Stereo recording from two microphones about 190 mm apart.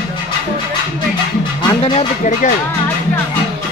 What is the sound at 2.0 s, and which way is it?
Speech, 40° left (ahead or behind).